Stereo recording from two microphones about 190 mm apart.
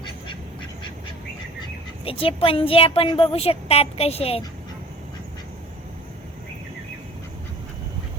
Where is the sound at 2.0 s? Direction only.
30° left (ahead or behind).